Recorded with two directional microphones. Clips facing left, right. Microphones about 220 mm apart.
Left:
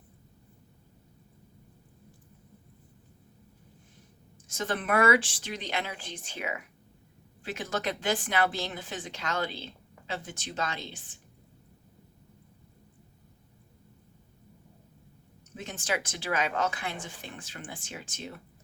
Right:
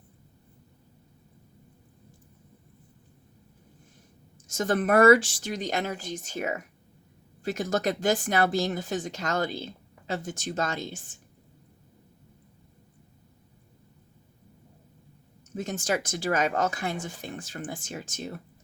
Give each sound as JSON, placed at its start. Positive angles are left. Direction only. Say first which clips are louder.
{"t": 4.4, "sound": "speech", "louder": "right 6 dB", "side_deg": -45}
{"t": 15.5, "sound": "speech", "louder": "right 5 dB", "side_deg": -45}